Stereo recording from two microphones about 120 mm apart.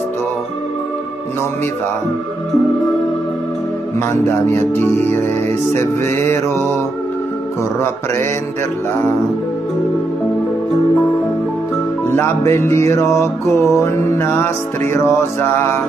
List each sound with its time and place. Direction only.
4.1 s music: 20° left (ahead or behind)
12.1 s music: 20° left (ahead or behind)